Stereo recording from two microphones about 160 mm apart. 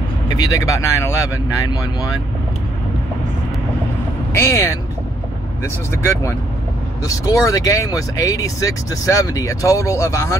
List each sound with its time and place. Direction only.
0.3 s speech: 20° left (ahead or behind)
4.3 s speech: 20° left (ahead or behind)
7.1 s speech: 20° left (ahead or behind)